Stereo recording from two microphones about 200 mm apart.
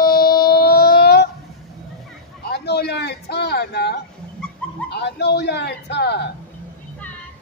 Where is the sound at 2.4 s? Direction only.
55° left (ahead or behind).